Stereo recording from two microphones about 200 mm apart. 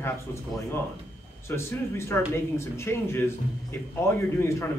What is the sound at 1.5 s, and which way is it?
Speech, 10° left (ahead or behind).